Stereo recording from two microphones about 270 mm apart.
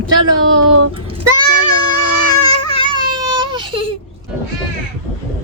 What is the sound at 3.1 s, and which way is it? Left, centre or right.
Baby cry, centre.